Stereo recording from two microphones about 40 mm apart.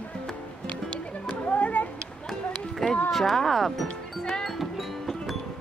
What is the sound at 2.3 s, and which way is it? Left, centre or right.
Run, centre.